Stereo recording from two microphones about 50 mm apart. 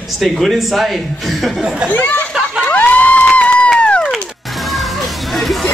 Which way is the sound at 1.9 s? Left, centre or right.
Left.